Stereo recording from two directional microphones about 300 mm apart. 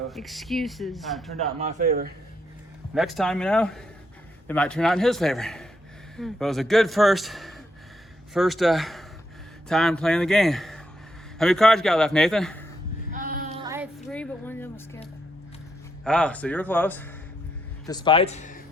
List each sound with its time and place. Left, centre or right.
0.1 s a man's voice: centre
1.5 s speech: right
2.9 s a man's voice: centre
13.1 s child singing: right
13.6 s child singing: centre
14.1 s a sound: centre
16.0 s a man's voice: centre; by 18.6 s left